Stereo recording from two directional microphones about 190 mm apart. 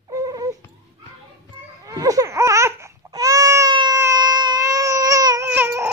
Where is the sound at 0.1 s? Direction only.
20° right (ahead or behind).